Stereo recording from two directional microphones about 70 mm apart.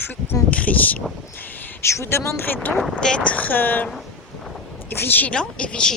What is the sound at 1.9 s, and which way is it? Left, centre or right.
Speech, left.